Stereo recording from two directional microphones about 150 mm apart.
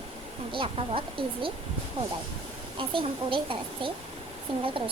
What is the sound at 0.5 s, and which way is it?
A child's voice, 35° right (ahead or behind).